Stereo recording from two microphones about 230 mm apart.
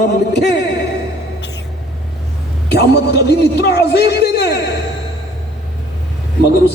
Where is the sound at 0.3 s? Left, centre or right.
Left.